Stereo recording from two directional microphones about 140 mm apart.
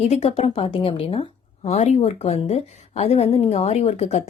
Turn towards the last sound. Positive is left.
turn(degrees=50)  # may be behind; listen again after turning